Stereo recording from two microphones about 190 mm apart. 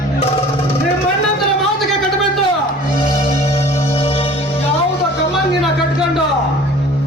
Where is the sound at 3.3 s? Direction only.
30° left (ahead or behind).